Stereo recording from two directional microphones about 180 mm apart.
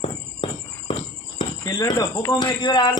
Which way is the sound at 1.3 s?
20° left (ahead or behind).